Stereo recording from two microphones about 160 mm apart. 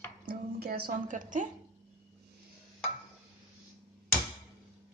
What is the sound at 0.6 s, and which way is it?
Speech, 75° right (ahead or behind).